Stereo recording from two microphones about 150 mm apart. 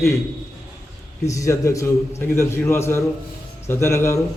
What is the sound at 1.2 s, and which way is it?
A man's voice, 20° left (ahead or behind).